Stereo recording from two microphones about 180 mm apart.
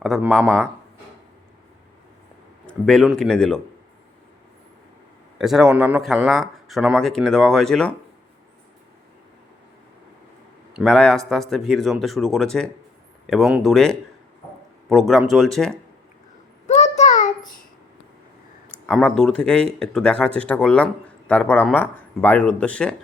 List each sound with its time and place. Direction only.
0.0 s speech: centre (ahead or behind)
2.6 s speech: 5° left (ahead or behind)
5.4 s speech: centre (ahead or behind)
10.8 s speech: 5° left (ahead or behind)
16.6 s a sound: 40° left (ahead or behind)
18.9 s speech: 5° left (ahead or behind)